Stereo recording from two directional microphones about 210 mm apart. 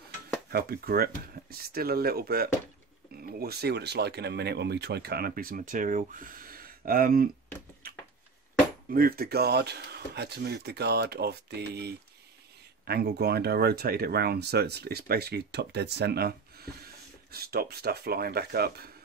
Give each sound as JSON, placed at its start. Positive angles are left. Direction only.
{"t": 0.5, "sound": "speech", "side_deg": -45}
{"t": 8.9, "sound": "speech", "side_deg": -45}